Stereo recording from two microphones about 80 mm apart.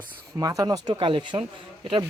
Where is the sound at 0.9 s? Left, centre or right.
Right.